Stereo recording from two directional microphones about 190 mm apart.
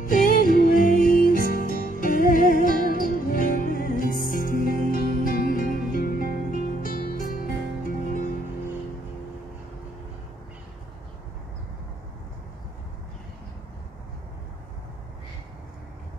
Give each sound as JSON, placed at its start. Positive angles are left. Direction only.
{"t": 0.0, "sound": "music", "side_deg": 45}